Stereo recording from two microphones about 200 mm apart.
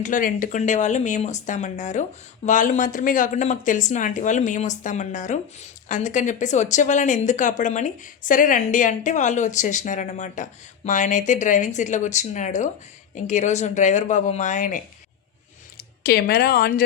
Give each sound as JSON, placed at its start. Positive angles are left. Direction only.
{"t": 0.0, "sound": "speech", "side_deg": 40}
{"t": 15.8, "sound": "speech", "side_deg": 50}